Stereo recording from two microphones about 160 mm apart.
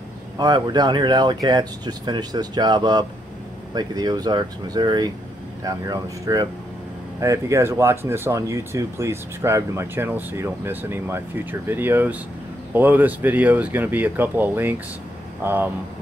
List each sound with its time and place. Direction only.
0.4 s speech: 25° right (ahead or behind)